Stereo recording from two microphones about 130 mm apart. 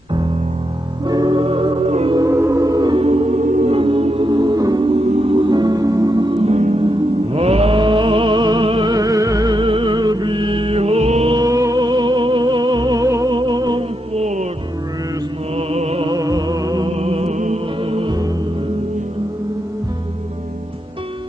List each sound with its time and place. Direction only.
1.0 s music: 30° right (ahead or behind)
1.4 s music: 45° right (ahead or behind)
2.1 s music: 25° right (ahead or behind)
3.0 s music: 50° right (ahead or behind)
3.7 s music: 45° right (ahead or behind)
4.3 s music: 35° right (ahead or behind)
6.5 s music: 65° right (ahead or behind)
7.3 s music: 50° right (ahead or behind)
11.3 s music: 25° right (ahead or behind)
14.1 s music: 60° right (ahead or behind)
15.5 s music: 55° right (ahead or behind)
16.1 s music: 30° right (ahead or behind)
17.0 s music: 50° right (ahead or behind)
17.9 s music: 40° right (ahead or behind)